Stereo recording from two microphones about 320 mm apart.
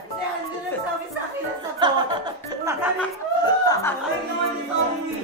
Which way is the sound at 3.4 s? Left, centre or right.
Centre.